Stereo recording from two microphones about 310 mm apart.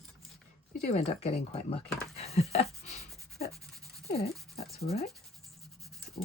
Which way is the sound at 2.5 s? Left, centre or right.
Left.